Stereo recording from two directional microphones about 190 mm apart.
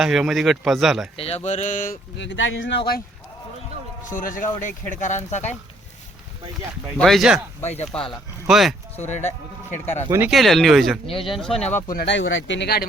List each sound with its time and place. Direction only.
0.0 s speech: centre (ahead or behind)
1.1 s speech: 30° left (ahead or behind)
2.1 s speech: 75° left (ahead or behind)
4.1 s speech: 45° left (ahead or behind)
6.9 s speech: centre (ahead or behind)
7.6 s speech: 35° left (ahead or behind)
7.9 s speech: centre (ahead or behind)
9.0 s speech: 35° left (ahead or behind)
10.1 s speech: 10° right (ahead or behind)
10.3 s speech: centre (ahead or behind)
11.1 s speech: 30° left (ahead or behind)
11.3 s speech: centre (ahead or behind)
11.9 s speech: 60° left (ahead or behind)